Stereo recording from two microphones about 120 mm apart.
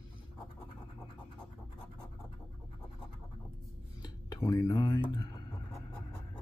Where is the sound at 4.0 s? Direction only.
30° left (ahead or behind).